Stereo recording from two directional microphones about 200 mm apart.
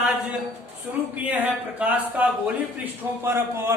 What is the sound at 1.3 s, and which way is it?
A man's voice, 5° right (ahead or behind).